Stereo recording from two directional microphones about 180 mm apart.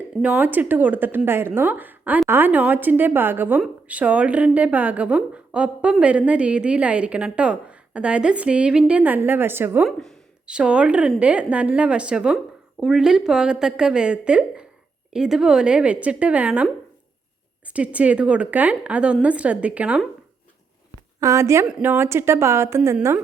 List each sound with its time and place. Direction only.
0.2 s speech: 10° right (ahead or behind)
9.8 s a woman's voice: centre (ahead or behind)
17.7 s speech: 5° right (ahead or behind)
21.2 s speech: 15° right (ahead or behind)